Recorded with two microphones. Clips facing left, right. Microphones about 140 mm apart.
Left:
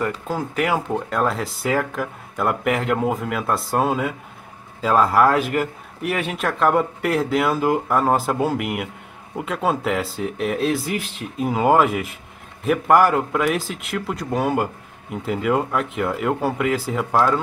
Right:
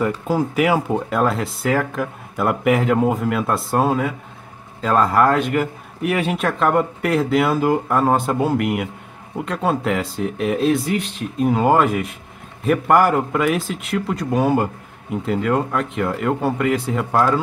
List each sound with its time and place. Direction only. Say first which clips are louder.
0.0 s speech: right 5 dB; 10° right (ahead or behind)